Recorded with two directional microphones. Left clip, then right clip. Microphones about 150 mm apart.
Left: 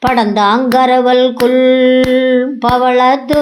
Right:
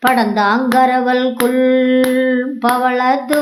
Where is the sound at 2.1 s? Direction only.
15° left (ahead or behind).